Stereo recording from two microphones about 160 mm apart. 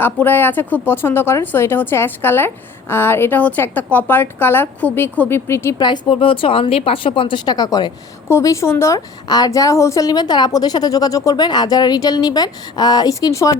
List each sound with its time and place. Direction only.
0.0 s speech: 10° left (ahead or behind)
5.8 s a woman's voice: 30° left (ahead or behind)